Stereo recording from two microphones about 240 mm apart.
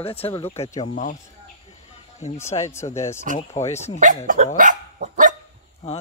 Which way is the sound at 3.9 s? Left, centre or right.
Right.